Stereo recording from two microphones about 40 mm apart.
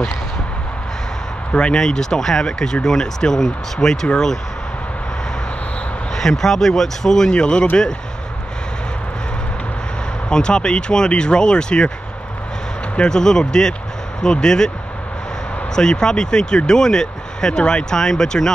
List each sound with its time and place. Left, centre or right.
1.5 s speech: left
1.8 s speech: centre
6.1 s speech: centre
7.2 s speech: left
10.3 s speech: left
12.9 s speech: left
15.7 s speech: centre